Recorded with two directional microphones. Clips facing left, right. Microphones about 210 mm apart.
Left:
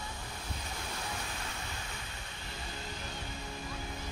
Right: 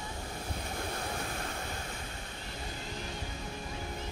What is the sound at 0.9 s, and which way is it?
Waves, 50° right (ahead or behind).